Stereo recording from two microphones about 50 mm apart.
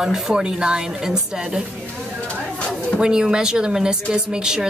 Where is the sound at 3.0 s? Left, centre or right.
Centre.